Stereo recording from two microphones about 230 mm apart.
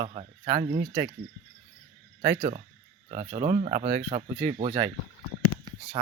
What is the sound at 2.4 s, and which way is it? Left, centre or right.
Speech, right.